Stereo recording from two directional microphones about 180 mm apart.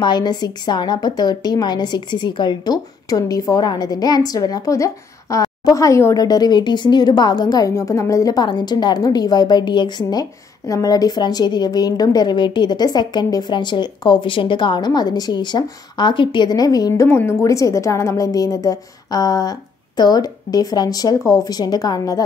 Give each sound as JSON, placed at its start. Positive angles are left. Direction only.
{"t": 0.0, "sound": "a woman's voice", "side_deg": 25}